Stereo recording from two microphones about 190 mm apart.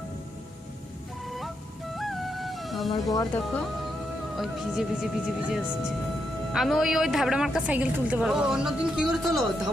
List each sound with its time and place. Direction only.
2.0 s music: centre (ahead or behind)
2.9 s speech: 20° left (ahead or behind)
4.4 s a woman's voice: centre (ahead or behind)